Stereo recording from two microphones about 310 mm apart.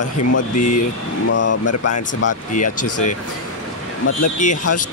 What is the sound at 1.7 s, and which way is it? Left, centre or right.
Speech, left.